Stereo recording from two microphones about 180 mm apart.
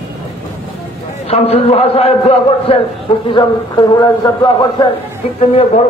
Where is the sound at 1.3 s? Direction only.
35° left (ahead or behind).